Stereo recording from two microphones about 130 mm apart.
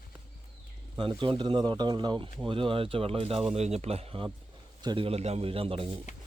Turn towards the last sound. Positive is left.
turn(degrees=-45)  # may be behind; listen again after turning